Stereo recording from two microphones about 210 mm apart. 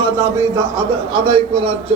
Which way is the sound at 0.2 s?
15° right (ahead or behind).